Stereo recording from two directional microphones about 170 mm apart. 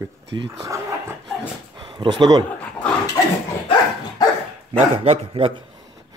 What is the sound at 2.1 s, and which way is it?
Speech, 25° right (ahead or behind).